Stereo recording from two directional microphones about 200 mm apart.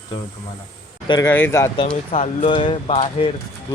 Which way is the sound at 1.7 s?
30° left (ahead or behind).